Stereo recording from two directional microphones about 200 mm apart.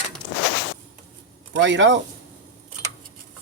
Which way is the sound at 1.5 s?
65° right (ahead or behind).